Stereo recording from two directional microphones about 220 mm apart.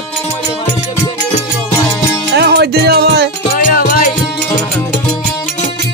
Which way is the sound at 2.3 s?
50° right (ahead or behind).